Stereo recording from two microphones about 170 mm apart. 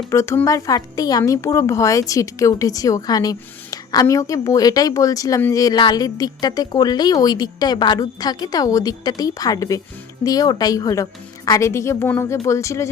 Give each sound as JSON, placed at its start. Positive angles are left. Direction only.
{"t": 0.1, "sound": "a woman's voice", "side_deg": 15}